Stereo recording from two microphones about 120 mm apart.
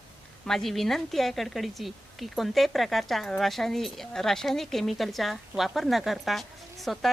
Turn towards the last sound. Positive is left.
turn(degrees=0)  # may be behind; listen again after turning